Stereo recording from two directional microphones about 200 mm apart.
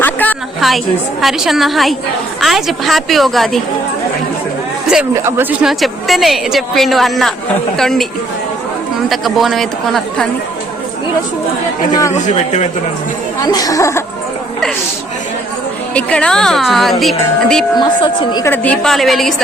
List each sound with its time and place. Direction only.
0.0 s a sound: 10° left (ahead or behind)
1.2 s a woman's voice: centre (ahead or behind)
5.1 s a woman's voice: 10° right (ahead or behind)
9.0 s a woman's voice: centre (ahead or behind)
12.1 s a man's voice: 35° left (ahead or behind)
13.4 s speech: 20° left (ahead or behind)
16.0 s a woman's voice: 5° left (ahead or behind)
17.7 s a woman's voice: 25° left (ahead or behind)
18.5 s a woman's voice: 5° left (ahead or behind)